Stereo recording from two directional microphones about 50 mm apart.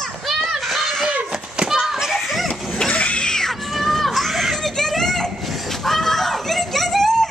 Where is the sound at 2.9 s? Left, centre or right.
Left.